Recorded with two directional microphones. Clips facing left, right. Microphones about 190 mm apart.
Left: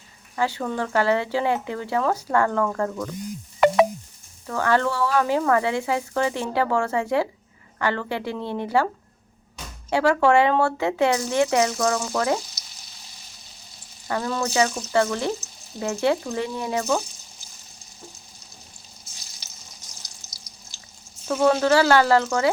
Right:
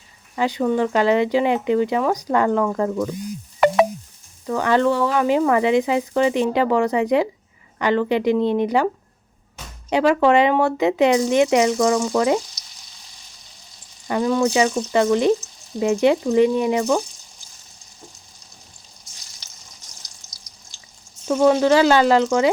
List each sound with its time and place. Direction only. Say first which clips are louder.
0.3 s speech: right 6 dB; 15° right (ahead or behind)
4.4 s speech: right 4 dB; 15° right (ahead or behind)
9.9 s speech: right 3 dB; 15° right (ahead or behind)
14.1 s speech: right 7 dB; 15° right (ahead or behind)
21.2 s speech: right 4 dB; 15° right (ahead or behind)